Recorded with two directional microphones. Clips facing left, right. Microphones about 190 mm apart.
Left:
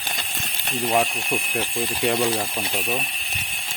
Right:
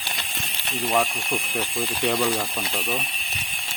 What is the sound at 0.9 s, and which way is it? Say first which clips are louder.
Speech: left 2 dB; 10° left (ahead or behind).